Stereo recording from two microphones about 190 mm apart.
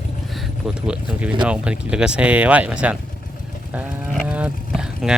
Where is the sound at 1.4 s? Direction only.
5° right (ahead or behind).